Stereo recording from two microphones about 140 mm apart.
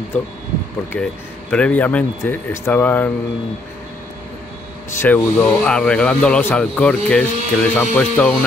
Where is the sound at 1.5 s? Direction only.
10° left (ahead or behind).